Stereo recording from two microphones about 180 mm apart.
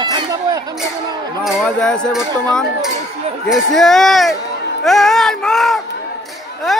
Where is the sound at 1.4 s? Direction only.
5° left (ahead or behind).